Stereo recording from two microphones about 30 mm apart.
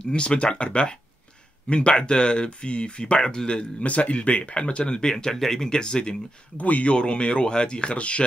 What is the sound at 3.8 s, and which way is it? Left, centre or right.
Speech, left.